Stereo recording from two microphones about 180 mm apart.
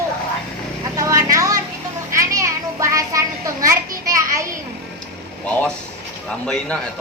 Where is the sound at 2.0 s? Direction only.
15° right (ahead or behind).